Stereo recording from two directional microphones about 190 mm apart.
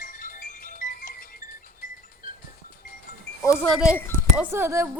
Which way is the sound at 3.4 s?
15° left (ahead or behind).